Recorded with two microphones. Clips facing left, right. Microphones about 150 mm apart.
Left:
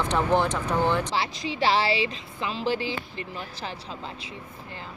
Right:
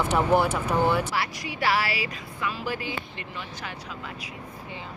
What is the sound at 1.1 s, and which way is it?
Speech, 25° left (ahead or behind).